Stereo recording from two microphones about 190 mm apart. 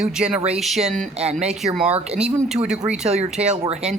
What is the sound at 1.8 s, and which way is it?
Speech, 35° right (ahead or behind).